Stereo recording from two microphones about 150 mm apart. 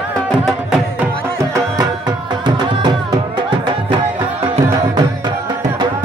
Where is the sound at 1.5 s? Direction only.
25° right (ahead or behind).